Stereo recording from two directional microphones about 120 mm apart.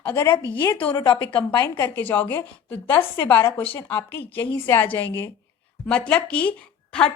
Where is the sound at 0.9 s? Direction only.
35° left (ahead or behind).